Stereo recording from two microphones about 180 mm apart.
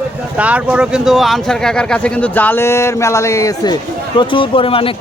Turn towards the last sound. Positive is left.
turn(degrees=30)  # may be behind; listen again after turning